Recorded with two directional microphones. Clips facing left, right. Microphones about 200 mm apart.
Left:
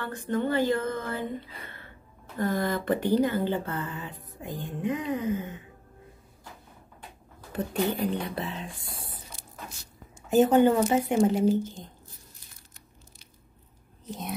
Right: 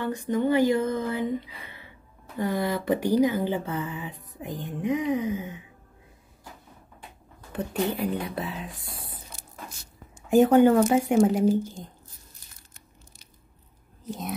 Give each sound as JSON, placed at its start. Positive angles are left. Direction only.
{"t": 0.3, "sound": "speech", "side_deg": -15}
{"t": 7.5, "sound": "speech", "side_deg": 0}
{"t": 10.3, "sound": "speech", "side_deg": -10}
{"t": 10.7, "sound": "speech", "side_deg": 5}
{"t": 11.2, "sound": "speech", "side_deg": -10}
{"t": 14.0, "sound": "speech", "side_deg": 0}